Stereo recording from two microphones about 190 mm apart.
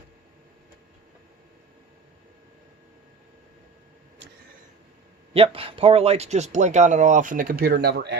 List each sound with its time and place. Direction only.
5.3 s speech: 30° right (ahead or behind); by 8.2 s 60° right (ahead or behind)